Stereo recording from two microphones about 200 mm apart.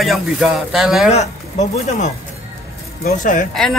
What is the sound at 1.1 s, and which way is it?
Speech, 35° left (ahead or behind).